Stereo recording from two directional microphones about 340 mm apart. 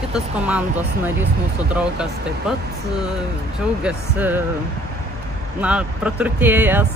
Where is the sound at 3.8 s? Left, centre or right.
Centre.